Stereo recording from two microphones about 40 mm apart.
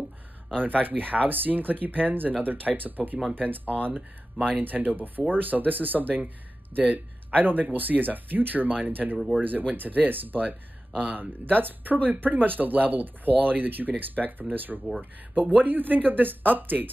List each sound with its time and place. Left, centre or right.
0.6 s speech: right